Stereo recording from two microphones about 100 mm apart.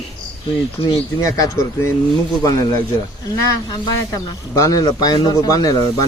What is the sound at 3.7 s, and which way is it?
Speech, 40° left (ahead or behind).